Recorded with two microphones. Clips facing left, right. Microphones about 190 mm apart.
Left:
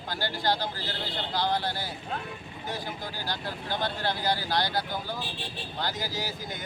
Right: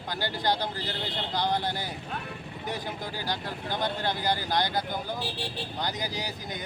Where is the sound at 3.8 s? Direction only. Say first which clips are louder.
Even; 15° right (ahead or behind).